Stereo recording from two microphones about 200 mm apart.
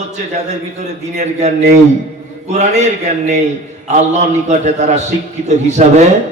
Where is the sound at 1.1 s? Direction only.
35° right (ahead or behind).